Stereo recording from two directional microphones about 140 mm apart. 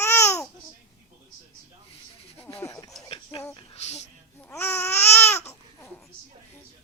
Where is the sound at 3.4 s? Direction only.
25° left (ahead or behind).